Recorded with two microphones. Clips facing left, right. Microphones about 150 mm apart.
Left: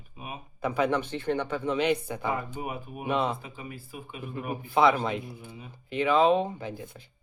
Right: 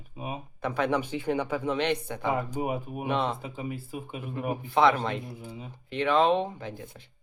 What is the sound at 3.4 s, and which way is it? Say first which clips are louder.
Speech: right 6 dB; 25° right (ahead or behind).